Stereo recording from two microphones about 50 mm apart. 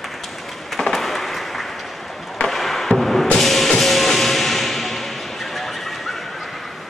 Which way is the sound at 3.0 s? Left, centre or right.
Centre.